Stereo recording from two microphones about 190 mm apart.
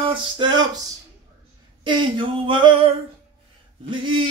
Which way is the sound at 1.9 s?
25° right (ahead or behind).